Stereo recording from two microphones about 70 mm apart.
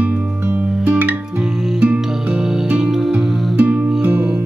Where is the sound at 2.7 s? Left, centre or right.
Centre.